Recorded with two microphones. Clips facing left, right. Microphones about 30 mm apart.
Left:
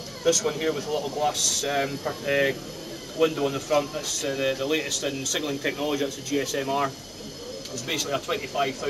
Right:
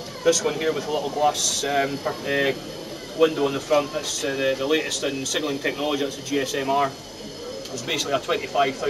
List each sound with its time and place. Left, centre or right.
0.2 s speech: centre
7.9 s speech: centre